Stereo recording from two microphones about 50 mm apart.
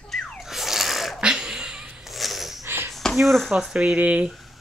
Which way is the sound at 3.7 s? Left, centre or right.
Centre.